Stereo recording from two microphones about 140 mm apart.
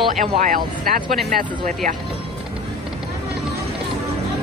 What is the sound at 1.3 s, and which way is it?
Speech, 75° right (ahead or behind).